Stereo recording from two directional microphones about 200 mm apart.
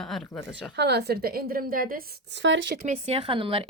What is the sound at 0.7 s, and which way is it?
A woman's voice, 55° right (ahead or behind).